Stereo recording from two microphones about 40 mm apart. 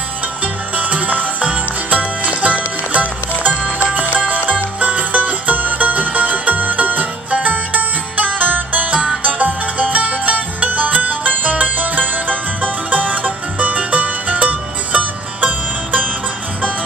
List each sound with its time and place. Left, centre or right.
0.7 s music: right